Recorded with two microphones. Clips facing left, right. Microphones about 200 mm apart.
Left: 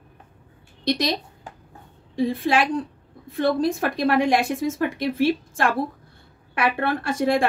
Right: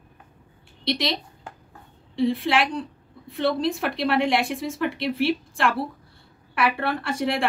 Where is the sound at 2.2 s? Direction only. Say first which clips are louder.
Left 1 dB; 45° left (ahead or behind).